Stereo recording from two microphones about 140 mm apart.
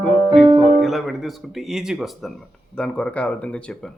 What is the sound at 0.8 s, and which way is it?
Speech, centre (ahead or behind).